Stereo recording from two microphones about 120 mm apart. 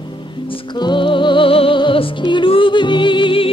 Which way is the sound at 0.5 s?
40° left (ahead or behind).